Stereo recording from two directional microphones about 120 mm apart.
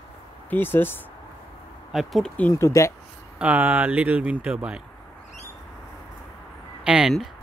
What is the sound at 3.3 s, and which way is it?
Speech, 15° right (ahead or behind).